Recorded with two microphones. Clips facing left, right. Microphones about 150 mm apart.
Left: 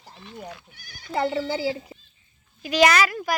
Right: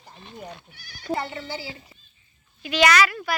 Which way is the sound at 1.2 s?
90° left.